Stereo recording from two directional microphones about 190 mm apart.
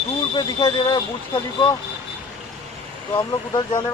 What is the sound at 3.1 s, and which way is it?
Speech, 25° left (ahead or behind).